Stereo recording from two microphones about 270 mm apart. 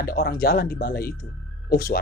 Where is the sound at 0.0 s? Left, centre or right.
Left.